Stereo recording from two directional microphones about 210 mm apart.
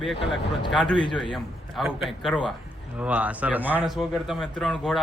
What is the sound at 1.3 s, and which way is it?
Speech, centre (ahead or behind).